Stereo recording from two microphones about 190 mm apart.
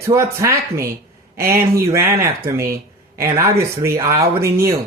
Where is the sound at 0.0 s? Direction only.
15° right (ahead or behind).